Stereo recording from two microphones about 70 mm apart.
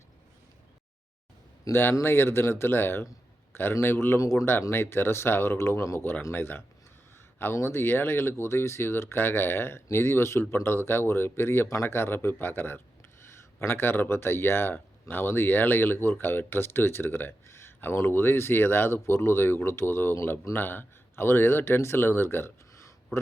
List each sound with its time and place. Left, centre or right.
1.7 s speech: left
4.2 s speech: left
4.7 s speech: left